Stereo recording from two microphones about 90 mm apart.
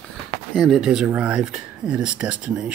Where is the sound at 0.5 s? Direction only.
Centre (ahead or behind).